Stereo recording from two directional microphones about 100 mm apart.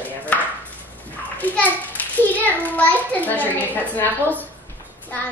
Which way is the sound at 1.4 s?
15° left (ahead or behind).